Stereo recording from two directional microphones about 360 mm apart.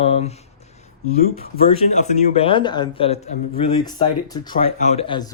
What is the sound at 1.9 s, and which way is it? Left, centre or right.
Speech, centre.